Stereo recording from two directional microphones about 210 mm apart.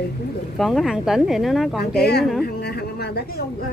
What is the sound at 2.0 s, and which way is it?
Speech, 50° left (ahead or behind).